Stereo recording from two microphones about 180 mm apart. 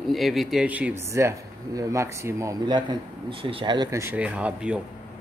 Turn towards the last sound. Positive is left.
turn(degrees=-5)  # may be behind; listen again after turning